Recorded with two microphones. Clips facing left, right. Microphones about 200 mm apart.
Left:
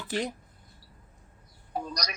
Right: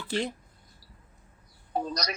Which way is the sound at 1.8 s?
30° right (ahead or behind).